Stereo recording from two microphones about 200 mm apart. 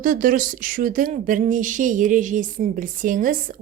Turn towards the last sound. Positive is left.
turn(degrees=-40)  # may be behind; listen again after turning